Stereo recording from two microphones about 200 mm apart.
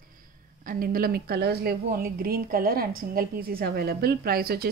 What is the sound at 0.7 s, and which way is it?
A woman's voice, 45° right (ahead or behind).